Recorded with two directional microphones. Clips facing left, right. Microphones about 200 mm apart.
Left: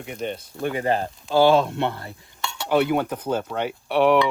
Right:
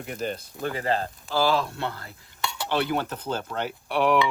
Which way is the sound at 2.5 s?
Centre (ahead or behind).